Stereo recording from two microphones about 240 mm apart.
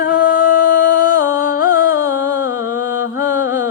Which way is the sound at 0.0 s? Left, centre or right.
Left.